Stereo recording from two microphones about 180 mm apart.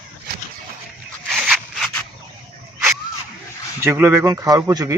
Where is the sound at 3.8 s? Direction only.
15° right (ahead or behind).